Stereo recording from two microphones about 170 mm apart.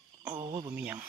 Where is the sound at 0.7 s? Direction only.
10° right (ahead or behind).